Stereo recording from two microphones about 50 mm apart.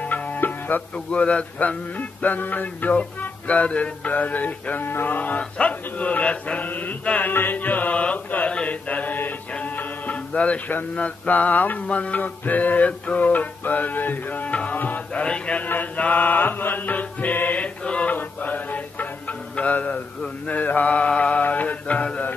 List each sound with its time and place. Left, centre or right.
0.0 s music: left
0.9 s mantra: left
2.0 s mantra: left
9.6 s music: left
10.7 s mantra: left
14.8 s music: left
15.2 s mantra: left
15.6 s music: left
17.8 s mantra: left
18.1 s music: left
20.4 s mantra: left